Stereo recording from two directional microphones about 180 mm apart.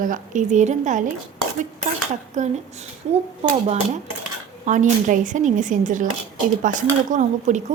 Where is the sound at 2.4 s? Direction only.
40° right (ahead or behind).